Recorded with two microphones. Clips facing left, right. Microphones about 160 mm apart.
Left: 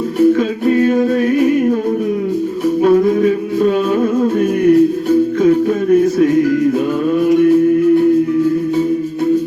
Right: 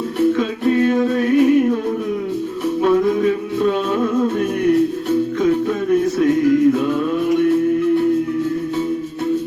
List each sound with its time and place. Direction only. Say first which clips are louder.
0.3 s music: left 3 dB; 50° left (ahead or behind)
2.8 s music: left 4 dB; 45° left (ahead or behind)